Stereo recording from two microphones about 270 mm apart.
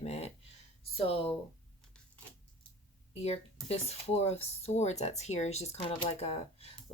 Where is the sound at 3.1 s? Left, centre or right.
Left.